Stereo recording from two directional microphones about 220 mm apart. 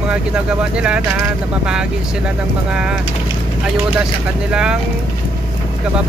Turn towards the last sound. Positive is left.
turn(degrees=-5)  # may be behind; listen again after turning